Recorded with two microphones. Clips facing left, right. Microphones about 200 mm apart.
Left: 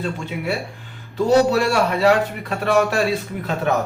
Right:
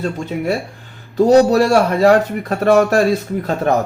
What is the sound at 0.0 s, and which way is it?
A man's voice, 40° right (ahead or behind).